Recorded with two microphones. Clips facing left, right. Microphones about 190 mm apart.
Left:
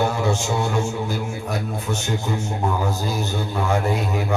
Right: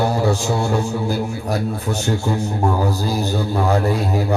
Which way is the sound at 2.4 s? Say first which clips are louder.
Right 4 dB; 35° right (ahead or behind).